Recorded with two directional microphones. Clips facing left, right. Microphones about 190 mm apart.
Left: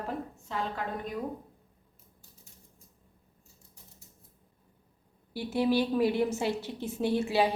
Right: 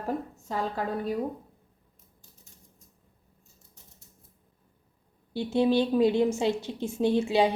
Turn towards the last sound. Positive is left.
turn(degrees=-20)  # may be behind; listen again after turning